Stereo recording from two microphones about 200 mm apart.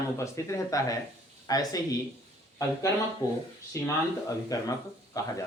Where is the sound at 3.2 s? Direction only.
20° left (ahead or behind).